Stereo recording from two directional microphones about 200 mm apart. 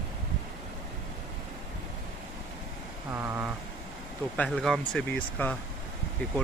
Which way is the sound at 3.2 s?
10° right (ahead or behind).